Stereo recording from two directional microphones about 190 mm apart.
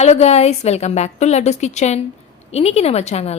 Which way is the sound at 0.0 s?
35° left (ahead or behind).